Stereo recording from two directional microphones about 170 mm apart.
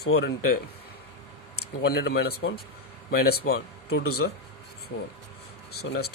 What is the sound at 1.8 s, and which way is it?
Speech, 80° left.